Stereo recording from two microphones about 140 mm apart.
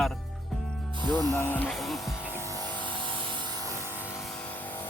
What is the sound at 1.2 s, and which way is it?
Speech, 15° left (ahead or behind).